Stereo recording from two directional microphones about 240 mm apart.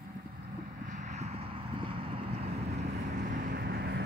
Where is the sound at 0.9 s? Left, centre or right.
Right.